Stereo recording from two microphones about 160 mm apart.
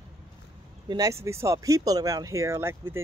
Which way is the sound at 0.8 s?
20° right (ahead or behind).